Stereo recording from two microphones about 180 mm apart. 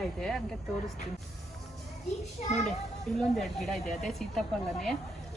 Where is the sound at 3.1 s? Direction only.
Centre (ahead or behind).